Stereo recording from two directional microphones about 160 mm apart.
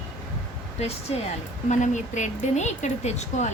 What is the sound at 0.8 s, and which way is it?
Speech, 40° left (ahead or behind).